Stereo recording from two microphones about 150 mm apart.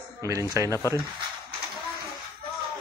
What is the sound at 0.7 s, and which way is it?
Speech, 20° left (ahead or behind).